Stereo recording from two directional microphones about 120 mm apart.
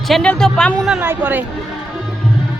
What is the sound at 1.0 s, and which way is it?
Speech, 15° right (ahead or behind).